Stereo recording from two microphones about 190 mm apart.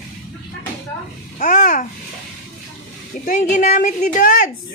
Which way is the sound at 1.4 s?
40° left (ahead or behind).